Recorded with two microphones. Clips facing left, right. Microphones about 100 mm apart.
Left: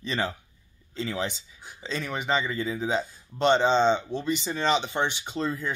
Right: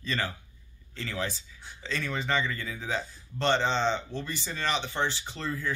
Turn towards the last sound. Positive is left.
turn(degrees=20)  # may be behind; listen again after turning